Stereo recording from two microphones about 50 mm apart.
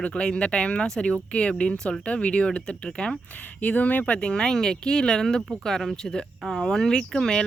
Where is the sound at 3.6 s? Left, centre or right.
Left.